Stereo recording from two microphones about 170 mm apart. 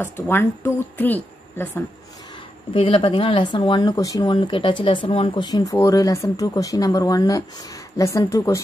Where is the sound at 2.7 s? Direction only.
30° left (ahead or behind).